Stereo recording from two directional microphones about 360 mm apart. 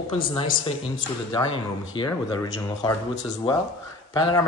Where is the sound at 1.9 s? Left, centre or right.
Centre.